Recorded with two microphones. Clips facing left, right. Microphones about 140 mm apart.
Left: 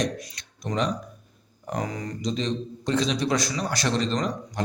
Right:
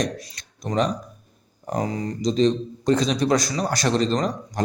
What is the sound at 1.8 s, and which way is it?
A man's voice, 30° right (ahead or behind).